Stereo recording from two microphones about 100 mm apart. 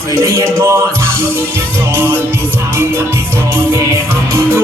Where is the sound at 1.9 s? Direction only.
20° right (ahead or behind).